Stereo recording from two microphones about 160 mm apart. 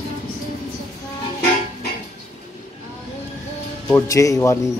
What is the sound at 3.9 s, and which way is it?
Speech, 20° left (ahead or behind).